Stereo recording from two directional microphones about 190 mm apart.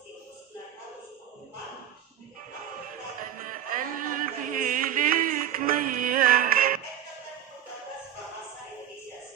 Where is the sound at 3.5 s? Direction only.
45° right (ahead or behind).